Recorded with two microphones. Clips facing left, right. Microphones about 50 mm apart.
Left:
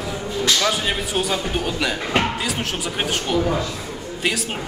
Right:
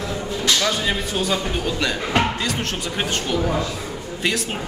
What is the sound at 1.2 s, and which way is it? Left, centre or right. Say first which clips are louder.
Speech: even; centre.